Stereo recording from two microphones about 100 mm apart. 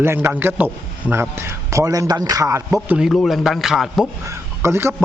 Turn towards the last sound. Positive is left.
turn(degrees=-25)  # may be behind; listen again after turning